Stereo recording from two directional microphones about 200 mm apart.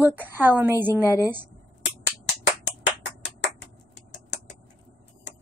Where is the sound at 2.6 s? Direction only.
65° left (ahead or behind).